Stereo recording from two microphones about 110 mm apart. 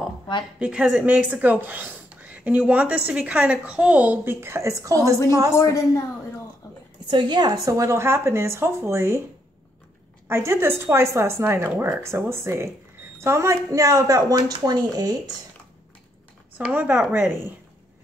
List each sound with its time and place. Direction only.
0.6 s a woman's voice: 5° right (ahead or behind); by 5.1 s 30° right (ahead or behind)
5.5 s speech: 30° left (ahead or behind)
7.1 s a woman's voice: 45° right (ahead or behind); by 9.2 s 25° right (ahead or behind)
10.2 s a woman's voice: 25° right (ahead or behind)
16.5 s a woman's voice: 15° right (ahead or behind)